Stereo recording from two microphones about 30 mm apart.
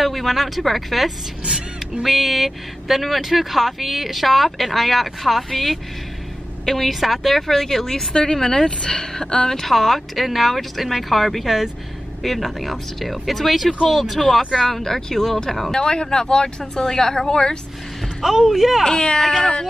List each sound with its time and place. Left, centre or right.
0.0 s speech: centre
1.4 s speech: right
2.0 s speech: centre
15.7 s speech: left
18.2 s speech: centre
18.9 s speech: left